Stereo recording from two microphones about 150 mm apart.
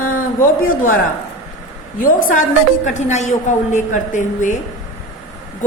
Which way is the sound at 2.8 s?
50° left (ahead or behind).